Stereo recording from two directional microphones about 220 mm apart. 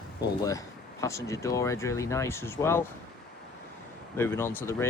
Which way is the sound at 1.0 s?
15° left (ahead or behind).